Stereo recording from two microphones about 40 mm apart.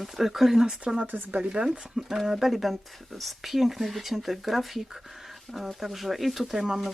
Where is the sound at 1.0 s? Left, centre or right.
Right.